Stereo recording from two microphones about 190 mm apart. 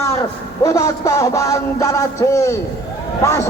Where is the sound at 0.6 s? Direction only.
15° left (ahead or behind).